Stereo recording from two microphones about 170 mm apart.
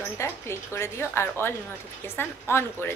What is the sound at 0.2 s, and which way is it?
A woman's voice, 15° left (ahead or behind).